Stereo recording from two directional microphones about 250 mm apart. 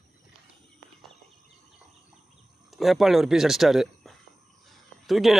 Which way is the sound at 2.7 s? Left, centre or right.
Centre.